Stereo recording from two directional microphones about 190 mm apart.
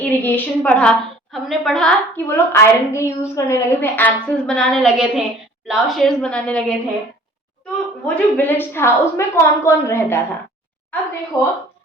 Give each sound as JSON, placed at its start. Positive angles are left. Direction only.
{"t": 0.0, "sound": "a woman's voice", "side_deg": 10}
{"t": 8.0, "sound": "a woman's voice", "side_deg": 10}
{"t": 11.3, "sound": "a woman's voice", "side_deg": 15}